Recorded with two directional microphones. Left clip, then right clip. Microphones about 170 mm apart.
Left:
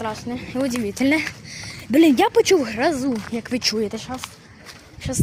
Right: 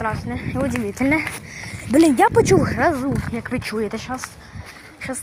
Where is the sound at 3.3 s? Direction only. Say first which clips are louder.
Left 3 dB; 30° left (ahead or behind).